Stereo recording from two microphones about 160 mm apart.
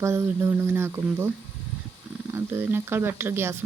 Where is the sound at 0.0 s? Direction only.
15° right (ahead or behind).